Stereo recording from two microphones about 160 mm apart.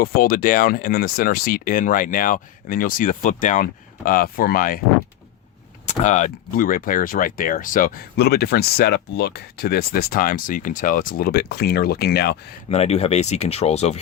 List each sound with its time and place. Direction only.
0.0 s speech: 65° left (ahead or behind)
5.8 s speech: 50° left (ahead or behind); by 12.4 s 85° left
12.6 s speech: 40° left (ahead or behind)